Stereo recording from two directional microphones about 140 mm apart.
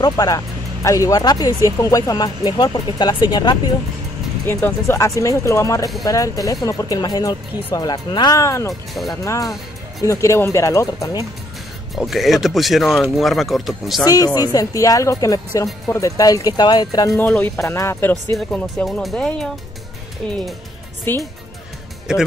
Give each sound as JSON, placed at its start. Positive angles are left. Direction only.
{"t": 0.0, "sound": "speech", "side_deg": 25}
{"t": 4.8, "sound": "speech", "side_deg": 20}
{"t": 11.9, "sound": "speech", "side_deg": 0}
{"t": 14.0, "sound": "speech", "side_deg": 25}
{"t": 17.2, "sound": "speech", "side_deg": 10}
{"t": 17.7, "sound": "speech", "side_deg": 20}
{"t": 18.5, "sound": "speech", "side_deg": 5}
{"t": 21.1, "sound": "speech", "side_deg": 15}